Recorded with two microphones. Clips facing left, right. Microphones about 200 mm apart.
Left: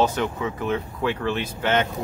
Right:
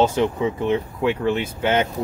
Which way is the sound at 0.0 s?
25° right (ahead or behind).